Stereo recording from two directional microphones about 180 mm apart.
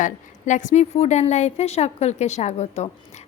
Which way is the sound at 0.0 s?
45° left (ahead or behind).